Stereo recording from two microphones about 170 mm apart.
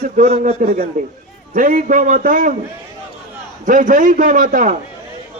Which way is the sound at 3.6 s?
50° right (ahead or behind).